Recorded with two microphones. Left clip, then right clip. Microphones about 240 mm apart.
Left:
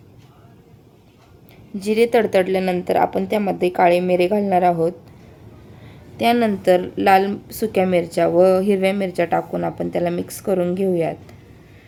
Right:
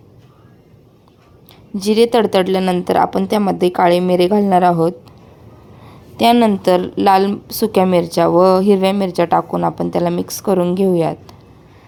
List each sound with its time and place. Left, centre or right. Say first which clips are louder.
1.7 s a woman's voice: right 3 dB; right
6.1 s a woman's voice: right 5 dB; right